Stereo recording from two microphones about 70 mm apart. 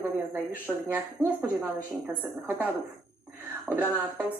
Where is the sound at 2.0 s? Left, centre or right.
Right.